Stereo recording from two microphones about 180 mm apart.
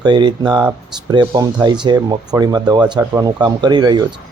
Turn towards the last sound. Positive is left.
turn(degrees=-25)  # may be behind; listen again after turning